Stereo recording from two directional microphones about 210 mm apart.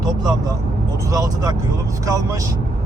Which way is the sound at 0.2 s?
20° right (ahead or behind).